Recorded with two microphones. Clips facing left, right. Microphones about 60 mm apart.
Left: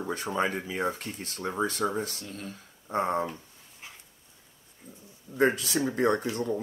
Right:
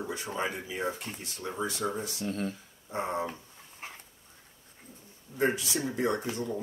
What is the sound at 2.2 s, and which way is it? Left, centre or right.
Speech, right.